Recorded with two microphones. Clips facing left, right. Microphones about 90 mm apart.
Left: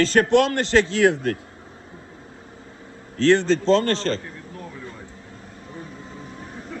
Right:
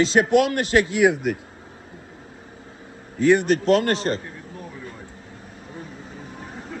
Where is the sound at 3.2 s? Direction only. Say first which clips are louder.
Even; 15° right (ahead or behind).